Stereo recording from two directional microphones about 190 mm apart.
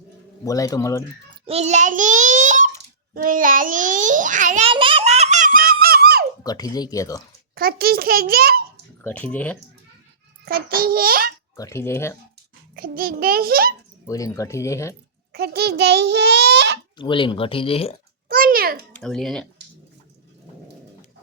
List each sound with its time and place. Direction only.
0.4 s speech: 15° left (ahead or behind)
1.5 s a child's voice: 35° right (ahead or behind)
4.7 s giggle: 25° right (ahead or behind); by 6.2 s 55° right (ahead or behind)
6.4 s speech: 20° left (ahead or behind)
7.5 s a child's voice: 50° right (ahead or behind)
9.0 s speech: 10° left (ahead or behind)
10.4 s a child's voice: 50° right (ahead or behind)
11.5 s speech: 15° left (ahead or behind)
12.7 s a child's voice: 50° right (ahead or behind)
14.1 s speech: 20° left (ahead or behind)
15.3 s a child's voice: 55° right (ahead or behind)
17.0 s speech: 25° left (ahead or behind)
18.3 s babbling: 50° right (ahead or behind)
18.9 s speech: centre (ahead or behind)